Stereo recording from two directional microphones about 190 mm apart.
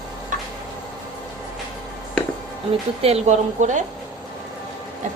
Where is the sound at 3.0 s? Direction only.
35° right (ahead or behind).